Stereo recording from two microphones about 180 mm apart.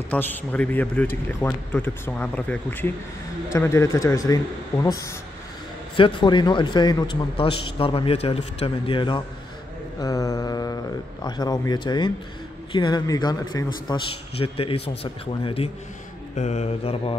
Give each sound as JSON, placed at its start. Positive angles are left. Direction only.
{"t": 0.1, "sound": "a man's voice", "side_deg": 10}
{"t": 9.9, "sound": "mantra", "side_deg": 20}
{"t": 11.2, "sound": "a man's voice", "side_deg": 20}